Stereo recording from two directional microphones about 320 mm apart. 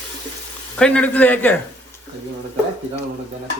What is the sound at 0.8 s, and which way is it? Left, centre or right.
Speech, centre.